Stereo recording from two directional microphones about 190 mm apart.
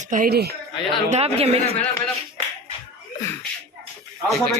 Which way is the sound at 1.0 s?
35° right (ahead or behind).